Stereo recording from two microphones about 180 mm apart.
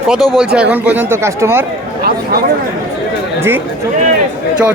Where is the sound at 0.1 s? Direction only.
Centre (ahead or behind).